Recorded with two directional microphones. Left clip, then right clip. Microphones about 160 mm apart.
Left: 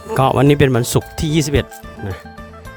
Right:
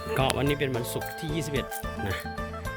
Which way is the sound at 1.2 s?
90° left.